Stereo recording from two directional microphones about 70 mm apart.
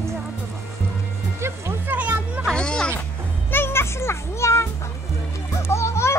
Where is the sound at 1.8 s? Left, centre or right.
Right.